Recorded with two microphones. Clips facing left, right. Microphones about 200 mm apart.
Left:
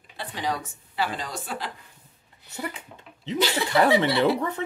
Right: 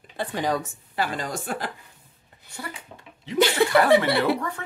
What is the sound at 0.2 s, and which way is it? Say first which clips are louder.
A woman's voice: right 4 dB; 50° right (ahead or behind).